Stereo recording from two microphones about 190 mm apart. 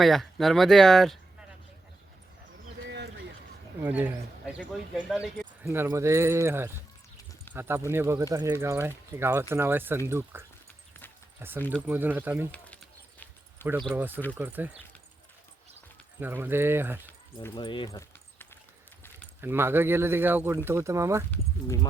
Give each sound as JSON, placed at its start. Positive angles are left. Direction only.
{"t": 0.0, "sound": "speech", "side_deg": 0}
{"t": 2.8, "sound": "a sound", "side_deg": -65}
{"t": 3.8, "sound": "speech", "side_deg": -5}
{"t": 5.6, "sound": "speech", "side_deg": -15}
{"t": 12.5, "sound": "a sound", "side_deg": 5}
{"t": 14.3, "sound": "speech", "side_deg": -10}
{"t": 16.2, "sound": "speech", "side_deg": -10}
{"t": 17.5, "sound": "a sound", "side_deg": 25}
{"t": 19.4, "sound": "speech", "side_deg": -10}